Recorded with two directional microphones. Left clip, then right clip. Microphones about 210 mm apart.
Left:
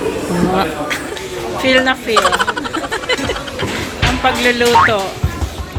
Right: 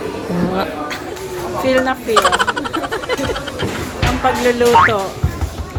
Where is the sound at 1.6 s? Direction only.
Centre (ahead or behind).